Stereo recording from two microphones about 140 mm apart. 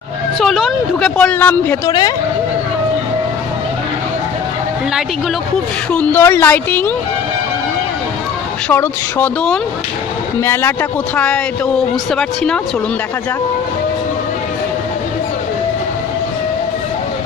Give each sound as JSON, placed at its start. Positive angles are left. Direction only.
{"t": 0.4, "sound": "a sound", "side_deg": 0}
{"t": 1.1, "sound": "speech", "side_deg": 10}
{"t": 1.9, "sound": "speech", "side_deg": 30}
{"t": 5.9, "sound": "speech", "side_deg": 15}
{"t": 8.6, "sound": "speech", "side_deg": 15}